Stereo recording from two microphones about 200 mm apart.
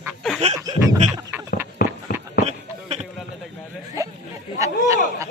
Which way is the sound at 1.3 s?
10° right (ahead or behind).